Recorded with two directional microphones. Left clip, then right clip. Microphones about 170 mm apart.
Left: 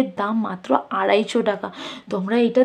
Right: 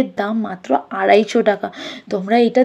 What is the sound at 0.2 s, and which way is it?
Speech, 15° right (ahead or behind).